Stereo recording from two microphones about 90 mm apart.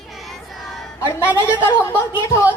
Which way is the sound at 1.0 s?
25° left (ahead or behind).